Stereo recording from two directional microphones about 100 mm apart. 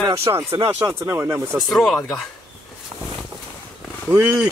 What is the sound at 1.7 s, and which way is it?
Speech, centre (ahead or behind).